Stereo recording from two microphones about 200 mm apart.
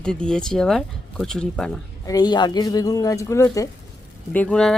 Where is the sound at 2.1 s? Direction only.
20° left (ahead or behind).